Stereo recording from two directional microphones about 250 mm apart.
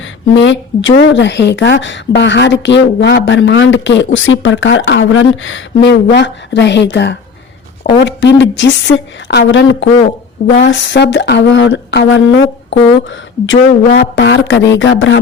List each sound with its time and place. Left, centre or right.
0.0 s speech: left